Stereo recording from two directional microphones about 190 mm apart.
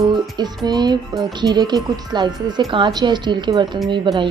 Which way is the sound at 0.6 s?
20° right (ahead or behind).